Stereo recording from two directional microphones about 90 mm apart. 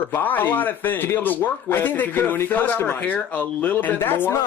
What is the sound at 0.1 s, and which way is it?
Speech, 20° left (ahead or behind).